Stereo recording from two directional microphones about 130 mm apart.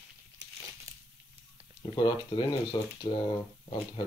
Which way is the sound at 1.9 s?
35° left (ahead or behind).